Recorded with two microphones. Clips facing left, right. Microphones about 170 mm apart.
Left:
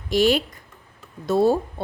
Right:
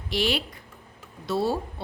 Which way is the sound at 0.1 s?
45° left (ahead or behind).